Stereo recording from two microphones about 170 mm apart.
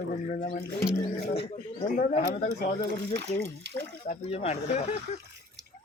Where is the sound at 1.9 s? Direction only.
50° left (ahead or behind).